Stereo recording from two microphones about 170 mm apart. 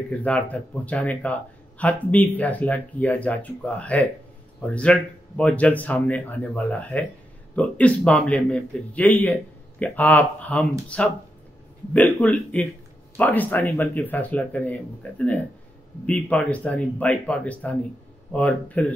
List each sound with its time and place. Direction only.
0.1 s a man's voice: 10° left (ahead or behind)